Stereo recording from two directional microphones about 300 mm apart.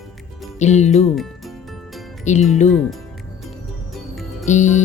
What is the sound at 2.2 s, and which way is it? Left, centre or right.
Speech, left.